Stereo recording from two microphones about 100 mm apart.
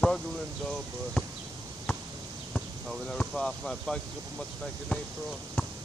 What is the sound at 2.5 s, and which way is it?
Speech, 5° left (ahead or behind).